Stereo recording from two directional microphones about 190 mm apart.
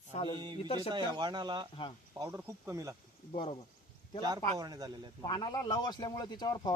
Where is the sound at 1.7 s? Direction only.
25° left (ahead or behind).